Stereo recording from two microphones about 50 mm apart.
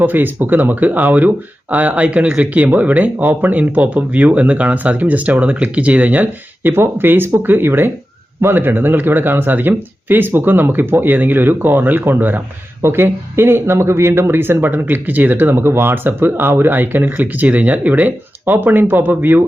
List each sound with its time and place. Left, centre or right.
0.0 s speech: right
6.7 s speech: right
12.8 s speech: right